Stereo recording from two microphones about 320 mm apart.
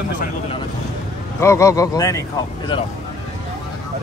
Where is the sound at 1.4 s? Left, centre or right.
Centre.